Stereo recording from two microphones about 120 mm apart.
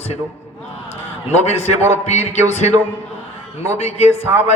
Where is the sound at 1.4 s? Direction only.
65° left (ahead or behind).